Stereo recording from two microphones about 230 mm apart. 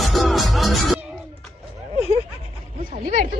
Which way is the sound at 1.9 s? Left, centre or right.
Left.